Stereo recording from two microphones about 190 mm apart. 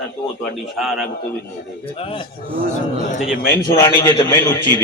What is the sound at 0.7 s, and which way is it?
Speech, centre (ahead or behind).